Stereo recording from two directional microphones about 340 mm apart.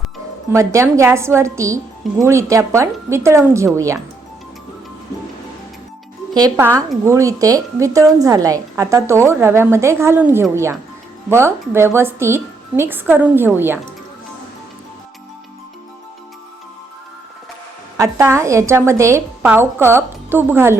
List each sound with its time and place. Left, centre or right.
0.5 s a woman's voice: centre
6.3 s a woman's voice: centre
17.9 s a woman's voice: centre